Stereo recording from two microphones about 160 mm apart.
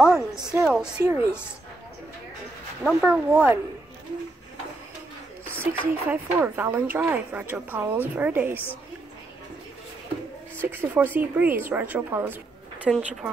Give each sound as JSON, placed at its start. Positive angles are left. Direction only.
{"t": 0.0, "sound": "a sound", "side_deg": -5}
{"t": 1.0, "sound": "a woman's voice", "side_deg": -20}
{"t": 2.8, "sound": "speech", "side_deg": -5}
{"t": 5.6, "sound": "speech", "side_deg": -10}
{"t": 10.6, "sound": "speech", "side_deg": -15}
{"t": 12.9, "sound": "speech", "side_deg": 0}